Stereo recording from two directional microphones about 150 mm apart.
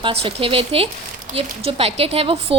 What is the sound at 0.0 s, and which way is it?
A woman's voice, 40° right (ahead or behind).